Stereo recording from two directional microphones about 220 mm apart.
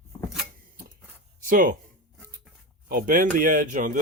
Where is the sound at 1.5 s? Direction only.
40° right (ahead or behind).